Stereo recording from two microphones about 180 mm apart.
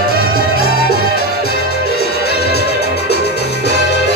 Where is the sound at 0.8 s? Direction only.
60° left (ahead or behind).